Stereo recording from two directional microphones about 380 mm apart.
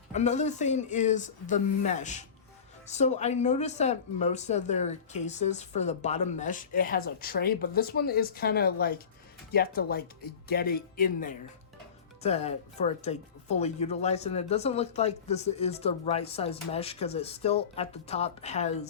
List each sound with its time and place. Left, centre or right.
0.1 s speech: centre